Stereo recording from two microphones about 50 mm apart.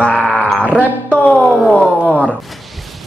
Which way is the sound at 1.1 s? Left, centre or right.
Left.